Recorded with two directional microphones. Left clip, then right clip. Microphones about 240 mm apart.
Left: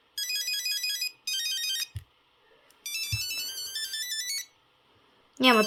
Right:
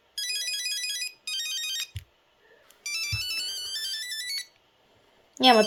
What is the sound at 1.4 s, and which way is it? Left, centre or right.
Ringtone, left.